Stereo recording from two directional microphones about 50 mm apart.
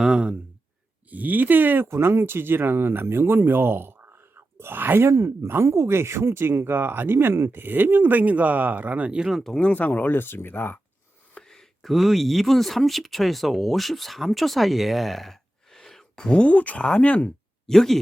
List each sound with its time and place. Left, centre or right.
0.0 s speech: centre
1.1 s speech: right
1.9 s speech: right
9.7 s speech: left
11.3 s speech: centre; by 17.3 s left
17.7 s speech: centre